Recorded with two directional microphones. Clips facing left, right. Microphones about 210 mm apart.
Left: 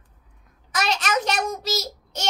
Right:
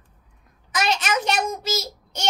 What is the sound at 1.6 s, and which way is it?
Child singing, centre (ahead or behind).